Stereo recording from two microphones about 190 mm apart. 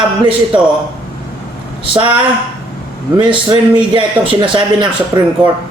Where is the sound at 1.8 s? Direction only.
25° right (ahead or behind).